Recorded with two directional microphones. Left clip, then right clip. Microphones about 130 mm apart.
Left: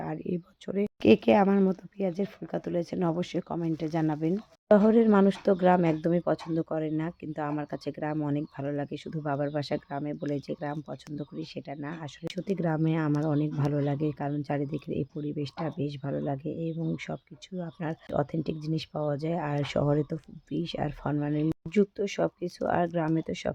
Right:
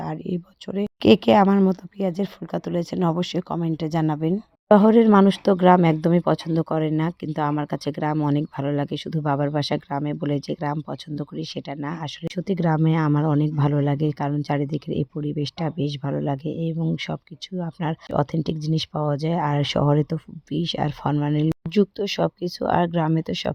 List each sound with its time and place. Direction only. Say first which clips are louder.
0.0 s speech: right 4 dB; 5° right (ahead or behind)
1.0 s speech: right 6 dB; 25° right (ahead or behind)